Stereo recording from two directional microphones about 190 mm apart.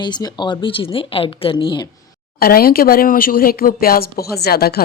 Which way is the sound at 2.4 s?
50° left (ahead or behind).